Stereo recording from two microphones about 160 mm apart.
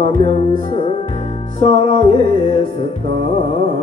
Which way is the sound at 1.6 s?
40° left (ahead or behind).